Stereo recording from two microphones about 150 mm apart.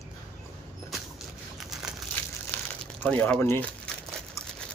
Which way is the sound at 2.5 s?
10° left (ahead or behind).